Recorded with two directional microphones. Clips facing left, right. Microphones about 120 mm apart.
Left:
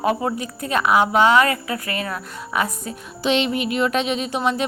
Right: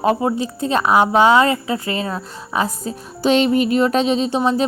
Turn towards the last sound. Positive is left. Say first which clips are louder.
# right 5 dB
turn(degrees=-30)  # may be behind; listen again after turning